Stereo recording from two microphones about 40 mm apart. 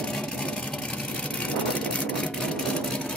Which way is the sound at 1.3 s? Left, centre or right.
Left.